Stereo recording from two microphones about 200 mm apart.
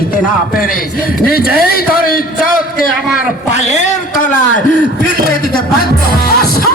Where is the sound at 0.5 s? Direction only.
45° left (ahead or behind).